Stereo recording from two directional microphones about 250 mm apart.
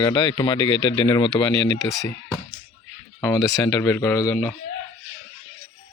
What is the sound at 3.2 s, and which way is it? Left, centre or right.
Speech, centre.